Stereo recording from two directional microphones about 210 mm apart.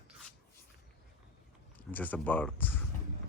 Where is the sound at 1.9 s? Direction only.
10° left (ahead or behind).